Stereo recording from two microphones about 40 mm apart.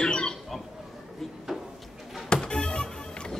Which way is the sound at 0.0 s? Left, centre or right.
Left.